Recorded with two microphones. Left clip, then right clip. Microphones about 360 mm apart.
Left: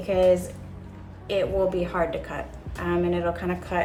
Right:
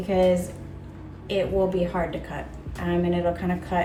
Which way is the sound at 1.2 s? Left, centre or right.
Centre.